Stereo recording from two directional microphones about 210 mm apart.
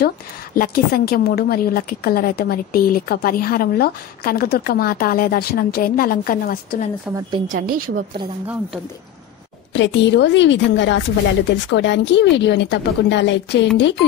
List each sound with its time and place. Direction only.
0.6 s a woman's voice: 45° left (ahead or behind)
7.4 s speech: 45° right (ahead or behind)
9.8 s speech: 60° left (ahead or behind)